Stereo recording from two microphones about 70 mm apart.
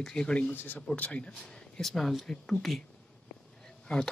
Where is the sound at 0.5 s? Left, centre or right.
Left; by 2.8 s centre.